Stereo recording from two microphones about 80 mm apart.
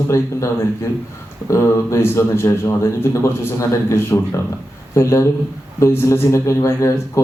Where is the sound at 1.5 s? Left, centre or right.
Left.